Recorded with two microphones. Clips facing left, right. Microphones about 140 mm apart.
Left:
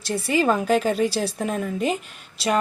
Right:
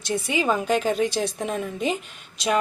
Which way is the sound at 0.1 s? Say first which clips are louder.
Left 2 dB; centre (ahead or behind).